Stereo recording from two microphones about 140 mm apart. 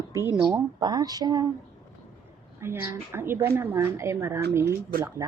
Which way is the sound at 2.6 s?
15° right (ahead or behind).